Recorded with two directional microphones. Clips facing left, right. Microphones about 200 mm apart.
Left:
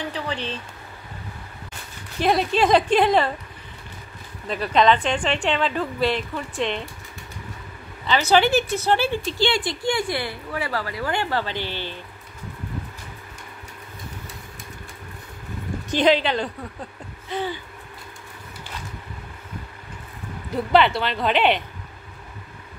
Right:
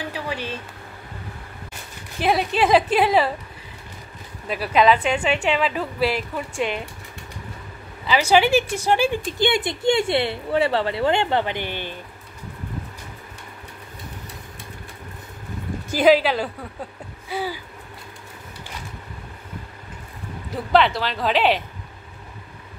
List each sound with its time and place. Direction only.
0.1 s a sound: 10° right (ahead or behind)
2.1 s a woman's voice: 5° right (ahead or behind)
4.5 s a woman's voice: 5° right (ahead or behind)
8.1 s a woman's voice: 10° right (ahead or behind)
11.6 s speech: 50° right (ahead or behind)
15.9 s a woman's voice: 5° right (ahead or behind)
17.3 s a sound: 10° right (ahead or behind)
20.7 s a woman's voice: centre (ahead or behind)